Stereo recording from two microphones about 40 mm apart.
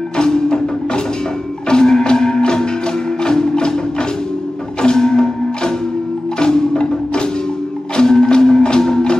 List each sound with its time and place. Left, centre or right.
0.2 s music: centre
4.8 s music: centre